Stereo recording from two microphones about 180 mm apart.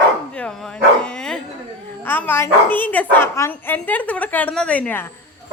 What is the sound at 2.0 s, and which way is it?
Speech, 10° left (ahead or behind).